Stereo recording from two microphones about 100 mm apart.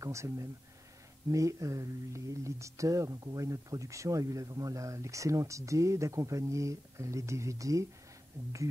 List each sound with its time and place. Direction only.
0.0 s speech: 30° right (ahead or behind)